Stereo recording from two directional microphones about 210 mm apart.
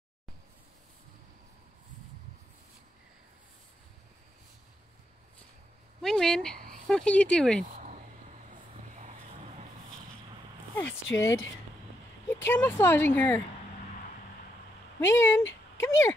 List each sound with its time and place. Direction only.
6.0 s speech: 5° left (ahead or behind)
7.8 s a sound: 35° right (ahead or behind)
8.9 s vehicle: 35° right (ahead or behind)
10.7 s a sound: 10° left (ahead or behind)
11.1 s speech: 15° left (ahead or behind)
15.0 s speech: 10° left (ahead or behind)